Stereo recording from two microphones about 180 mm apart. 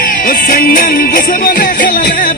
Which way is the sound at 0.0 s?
50° left (ahead or behind).